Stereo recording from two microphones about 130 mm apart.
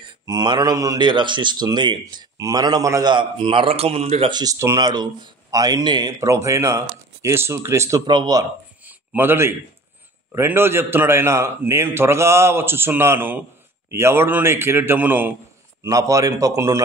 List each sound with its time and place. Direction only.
0.3 s a man's voice: 30° right (ahead or behind); by 4.3 s 50° right (ahead or behind)
4.3 s speech: 30° right (ahead or behind)
8.1 s a man's voice: 35° right (ahead or behind)
8.8 s a sound: 15° right (ahead or behind)
10.3 s a man's voice: 20° right (ahead or behind)
15.8 s speech: 25° right (ahead or behind)